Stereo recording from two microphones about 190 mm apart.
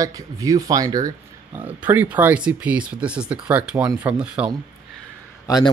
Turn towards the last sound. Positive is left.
turn(degrees=20)  # may be behind; listen again after turning